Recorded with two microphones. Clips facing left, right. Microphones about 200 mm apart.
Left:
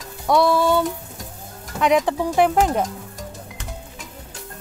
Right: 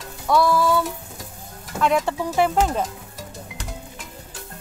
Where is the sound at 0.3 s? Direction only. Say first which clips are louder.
Left 2 dB; 25° left (ahead or behind).